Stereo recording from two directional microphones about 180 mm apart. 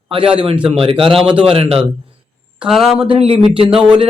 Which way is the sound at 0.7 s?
30° right (ahead or behind).